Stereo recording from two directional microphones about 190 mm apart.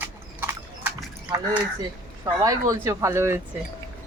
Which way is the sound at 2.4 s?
15° right (ahead or behind).